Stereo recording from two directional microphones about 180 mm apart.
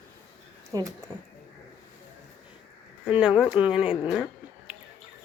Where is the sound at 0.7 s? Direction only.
20° right (ahead or behind).